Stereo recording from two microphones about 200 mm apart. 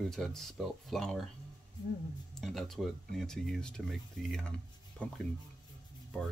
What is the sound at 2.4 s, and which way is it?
Speech, centre (ahead or behind).